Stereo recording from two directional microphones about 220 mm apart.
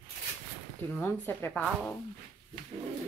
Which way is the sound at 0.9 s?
10° left (ahead or behind).